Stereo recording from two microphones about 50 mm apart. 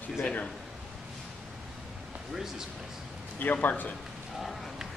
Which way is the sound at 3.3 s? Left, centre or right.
Left.